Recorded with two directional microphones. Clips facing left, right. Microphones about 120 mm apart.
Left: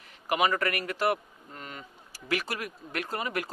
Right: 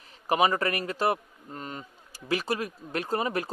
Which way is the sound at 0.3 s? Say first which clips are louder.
Right 2 dB; 30° right (ahead or behind).